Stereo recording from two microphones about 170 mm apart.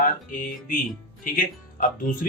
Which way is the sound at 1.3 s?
50° left (ahead or behind).